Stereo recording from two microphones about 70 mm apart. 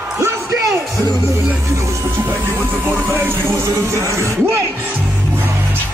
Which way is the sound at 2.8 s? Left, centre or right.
Right.